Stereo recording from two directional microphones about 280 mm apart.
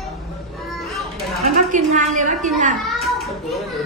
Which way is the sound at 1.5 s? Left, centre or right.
Right.